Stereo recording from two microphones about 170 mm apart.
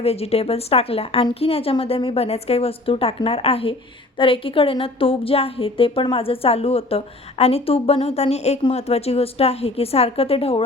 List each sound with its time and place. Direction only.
0.0 s a woman's voice: 35° left (ahead or behind)